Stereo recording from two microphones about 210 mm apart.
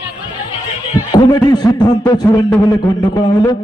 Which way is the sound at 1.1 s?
20° left (ahead or behind).